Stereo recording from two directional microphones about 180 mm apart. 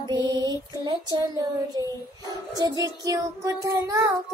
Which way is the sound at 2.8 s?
15° right (ahead or behind).